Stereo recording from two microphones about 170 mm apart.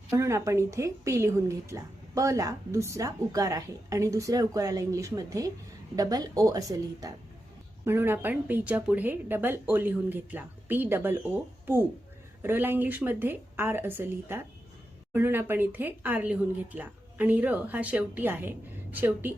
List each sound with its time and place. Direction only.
0.2 s a woman's voice: 15° right (ahead or behind)